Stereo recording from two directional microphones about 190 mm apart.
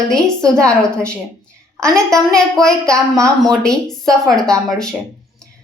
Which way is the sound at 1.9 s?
5° left (ahead or behind).